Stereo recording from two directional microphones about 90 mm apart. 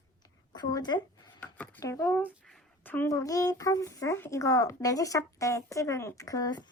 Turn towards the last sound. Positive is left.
turn(degrees=45)  # may be behind; listen again after turning